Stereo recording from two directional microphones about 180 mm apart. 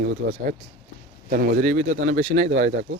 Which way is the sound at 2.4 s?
75° right (ahead or behind).